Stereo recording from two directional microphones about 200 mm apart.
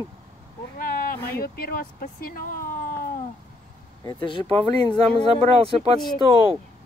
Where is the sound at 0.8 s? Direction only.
45° left (ahead or behind).